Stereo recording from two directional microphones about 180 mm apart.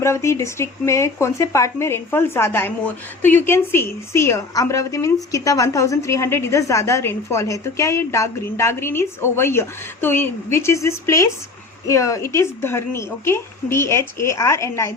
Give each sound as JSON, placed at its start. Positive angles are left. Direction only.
{"t": 0.0, "sound": "speech", "side_deg": 15}